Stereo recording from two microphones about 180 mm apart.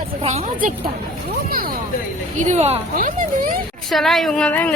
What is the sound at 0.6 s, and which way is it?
Speech, 50° right (ahead or behind).